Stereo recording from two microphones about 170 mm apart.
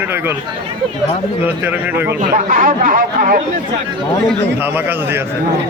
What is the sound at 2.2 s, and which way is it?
Speech, 50° right (ahead or behind).